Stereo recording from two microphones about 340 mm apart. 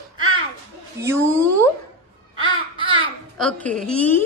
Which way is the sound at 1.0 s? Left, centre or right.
Centre.